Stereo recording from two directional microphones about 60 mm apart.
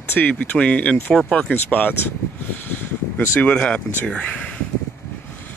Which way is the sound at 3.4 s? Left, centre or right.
Centre.